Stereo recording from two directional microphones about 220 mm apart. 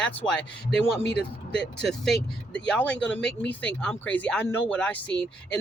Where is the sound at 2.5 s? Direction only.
5° left (ahead or behind).